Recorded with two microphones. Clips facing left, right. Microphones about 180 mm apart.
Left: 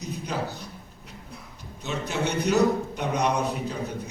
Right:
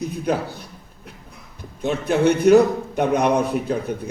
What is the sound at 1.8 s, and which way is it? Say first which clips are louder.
A man's voice: right 10 dB; 55° right (ahead or behind).